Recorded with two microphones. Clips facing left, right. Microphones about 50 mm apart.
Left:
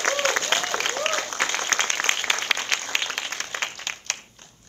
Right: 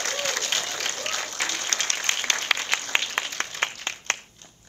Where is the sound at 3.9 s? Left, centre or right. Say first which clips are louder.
Even; right.